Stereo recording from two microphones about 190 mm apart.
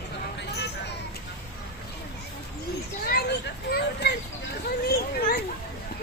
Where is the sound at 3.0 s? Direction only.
55° left (ahead or behind).